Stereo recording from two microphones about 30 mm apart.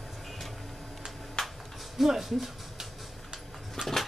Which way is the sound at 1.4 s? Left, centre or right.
Left.